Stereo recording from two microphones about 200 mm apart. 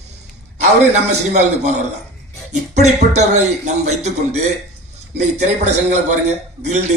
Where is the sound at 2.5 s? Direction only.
35° right (ahead or behind).